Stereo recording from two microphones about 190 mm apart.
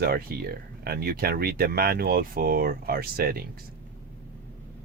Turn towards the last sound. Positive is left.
turn(degrees=-50)  # may be behind; listen again after turning